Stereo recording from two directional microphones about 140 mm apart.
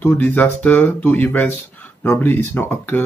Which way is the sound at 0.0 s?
15° left (ahead or behind).